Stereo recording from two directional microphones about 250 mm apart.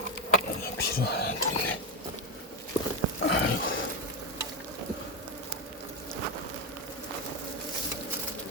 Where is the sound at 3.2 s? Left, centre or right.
Left.